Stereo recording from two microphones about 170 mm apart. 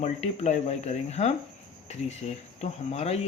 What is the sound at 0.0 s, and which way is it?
Speech, 40° left (ahead or behind).